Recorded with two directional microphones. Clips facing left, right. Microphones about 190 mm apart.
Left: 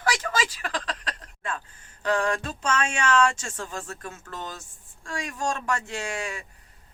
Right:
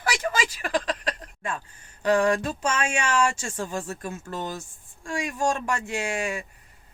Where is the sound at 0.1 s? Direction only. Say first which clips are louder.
Right 1 dB; 15° right (ahead or behind).